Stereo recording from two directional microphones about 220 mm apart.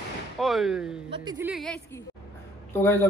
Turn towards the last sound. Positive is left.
turn(degrees=10)  # may be behind; listen again after turning